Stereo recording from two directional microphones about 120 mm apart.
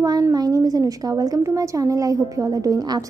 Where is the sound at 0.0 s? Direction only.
35° right (ahead or behind).